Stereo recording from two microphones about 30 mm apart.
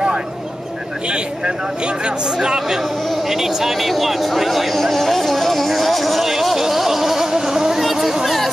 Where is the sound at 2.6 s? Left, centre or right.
Centre.